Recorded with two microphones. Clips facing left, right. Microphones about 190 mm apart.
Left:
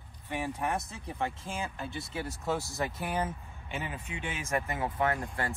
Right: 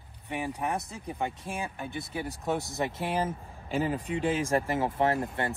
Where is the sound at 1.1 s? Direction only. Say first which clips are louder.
Right 2 dB; 15° right (ahead or behind).